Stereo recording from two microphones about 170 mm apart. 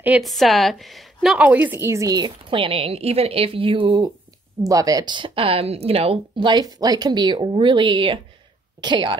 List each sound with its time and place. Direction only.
0.0 s a woman's voice: 5° right (ahead or behind); by 9.1 s 25° right (ahead or behind)